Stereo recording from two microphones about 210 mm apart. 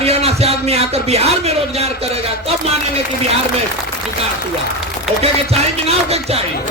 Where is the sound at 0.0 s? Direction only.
30° right (ahead or behind).